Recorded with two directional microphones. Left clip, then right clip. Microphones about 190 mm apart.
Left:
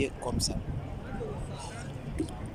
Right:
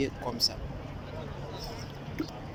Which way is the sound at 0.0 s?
10° left (ahead or behind).